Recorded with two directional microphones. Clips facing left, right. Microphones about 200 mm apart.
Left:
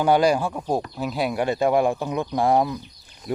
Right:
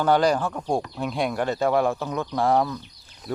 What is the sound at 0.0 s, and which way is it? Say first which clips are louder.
Speech: left 2 dB; 10° left (ahead or behind).